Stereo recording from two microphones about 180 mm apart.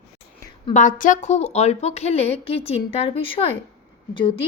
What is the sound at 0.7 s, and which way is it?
A woman's voice, 45° left (ahead or behind).